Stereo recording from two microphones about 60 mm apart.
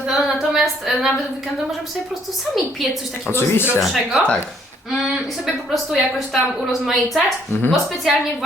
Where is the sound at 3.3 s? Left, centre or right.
Left.